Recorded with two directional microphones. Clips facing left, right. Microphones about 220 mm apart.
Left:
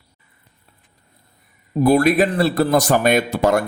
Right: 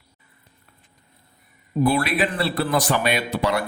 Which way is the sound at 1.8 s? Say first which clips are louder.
Left 6 dB; 45° left (ahead or behind).